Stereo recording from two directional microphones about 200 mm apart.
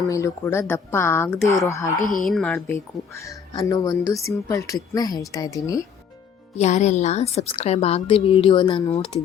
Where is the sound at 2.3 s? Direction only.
5° left (ahead or behind).